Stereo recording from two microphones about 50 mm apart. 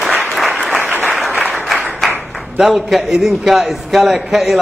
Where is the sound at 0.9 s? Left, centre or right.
Right.